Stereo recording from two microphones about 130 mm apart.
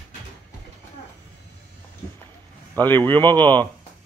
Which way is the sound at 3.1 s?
15° left (ahead or behind).